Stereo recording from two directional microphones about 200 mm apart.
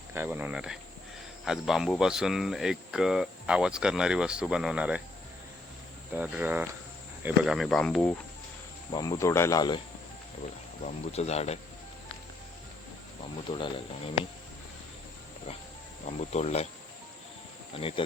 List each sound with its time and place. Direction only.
0.1 s speech: 10° right (ahead or behind)
6.1 s speech: 5° right (ahead or behind)
8.9 s speech: 20° left (ahead or behind)
10.8 s speech: 30° left (ahead or behind)
13.5 s speech: 25° left (ahead or behind)
16.0 s speech: 35° left (ahead or behind)
17.7 s speech: 25° left (ahead or behind)